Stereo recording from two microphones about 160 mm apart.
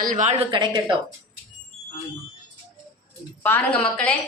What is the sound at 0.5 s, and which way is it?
Speech, 30° right (ahead or behind).